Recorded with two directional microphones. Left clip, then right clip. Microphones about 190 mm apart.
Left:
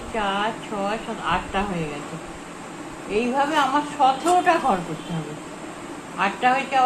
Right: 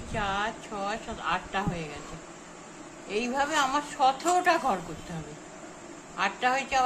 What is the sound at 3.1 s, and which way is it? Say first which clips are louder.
A woman's voice: left 6 dB; 20° right (ahead or behind).